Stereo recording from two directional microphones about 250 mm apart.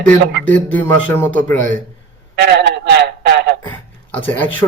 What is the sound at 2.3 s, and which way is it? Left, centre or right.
A man's voice, right.